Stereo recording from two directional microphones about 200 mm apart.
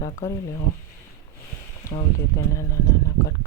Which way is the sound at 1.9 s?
25° left (ahead or behind).